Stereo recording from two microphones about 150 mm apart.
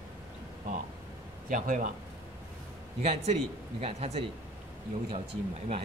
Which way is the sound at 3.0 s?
45° right (ahead or behind).